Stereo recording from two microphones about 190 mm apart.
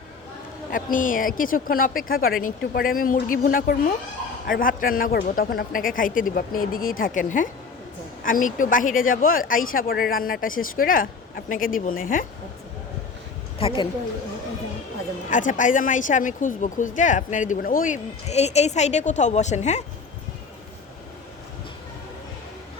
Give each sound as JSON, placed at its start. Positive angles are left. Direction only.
{"t": 0.7, "sound": "speech", "side_deg": 45}
{"t": 13.6, "sound": "a woman's voice", "side_deg": 30}
{"t": 15.3, "sound": "speech", "side_deg": 45}